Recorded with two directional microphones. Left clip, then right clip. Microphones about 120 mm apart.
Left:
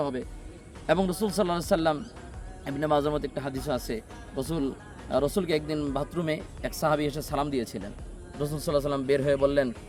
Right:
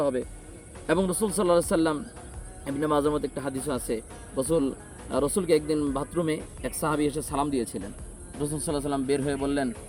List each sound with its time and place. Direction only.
0.9 s a man's voice: 35° left (ahead or behind)